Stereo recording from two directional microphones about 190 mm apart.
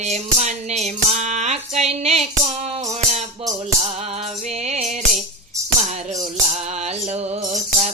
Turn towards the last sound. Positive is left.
turn(degrees=-40)  # may be behind; listen again after turning